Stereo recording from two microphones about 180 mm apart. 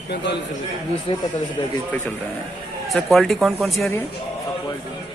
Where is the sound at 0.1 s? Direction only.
75° left (ahead or behind).